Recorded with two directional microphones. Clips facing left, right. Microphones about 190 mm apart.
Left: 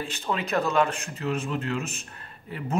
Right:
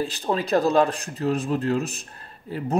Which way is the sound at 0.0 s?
35° right (ahead or behind).